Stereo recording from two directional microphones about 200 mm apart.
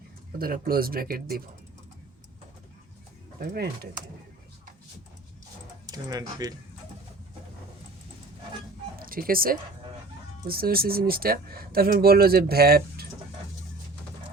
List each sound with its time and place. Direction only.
0.3 s speech: 45° right (ahead or behind)
3.4 s speech: 50° right (ahead or behind)
5.8 s speech: 20° right (ahead or behind)
9.0 s speech: 45° right (ahead or behind)